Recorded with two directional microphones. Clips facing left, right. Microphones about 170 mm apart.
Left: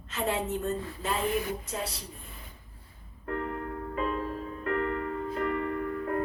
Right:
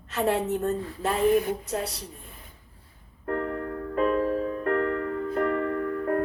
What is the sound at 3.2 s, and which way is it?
Music, 55° right (ahead or behind).